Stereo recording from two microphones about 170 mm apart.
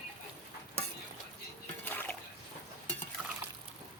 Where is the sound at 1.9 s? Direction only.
10° left (ahead or behind).